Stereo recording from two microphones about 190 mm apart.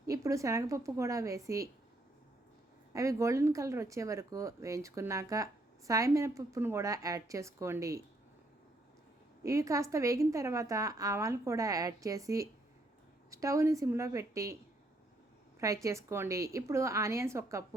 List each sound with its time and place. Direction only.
0.1 s a woman's voice: 15° right (ahead or behind)
2.9 s a woman's voice: 15° right (ahead or behind)
9.4 s a woman's voice: 15° right (ahead or behind)
15.6 s a woman's voice: 15° right (ahead or behind)